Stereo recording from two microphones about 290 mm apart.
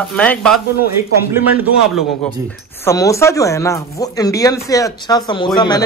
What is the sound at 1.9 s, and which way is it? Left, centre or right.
Speech, centre.